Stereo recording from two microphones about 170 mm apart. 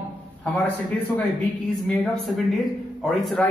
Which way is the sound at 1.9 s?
Centre (ahead or behind).